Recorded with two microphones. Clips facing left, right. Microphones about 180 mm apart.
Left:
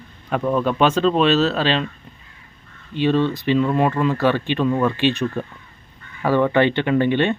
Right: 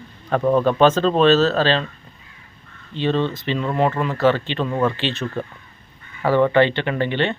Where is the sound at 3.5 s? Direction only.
20° right (ahead or behind).